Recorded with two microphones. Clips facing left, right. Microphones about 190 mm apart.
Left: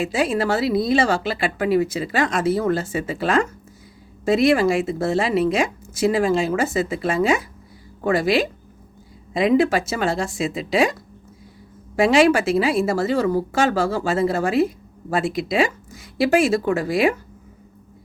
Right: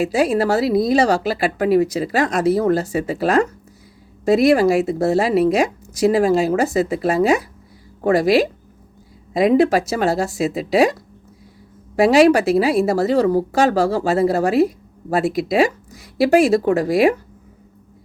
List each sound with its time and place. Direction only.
0.0 s a woman's voice: 40° right (ahead or behind)
10.4 s speech: centre (ahead or behind)
11.9 s a woman's voice: 40° right (ahead or behind)
15.2 s speech: centre (ahead or behind)
15.5 s a woman's voice: 40° right (ahead or behind)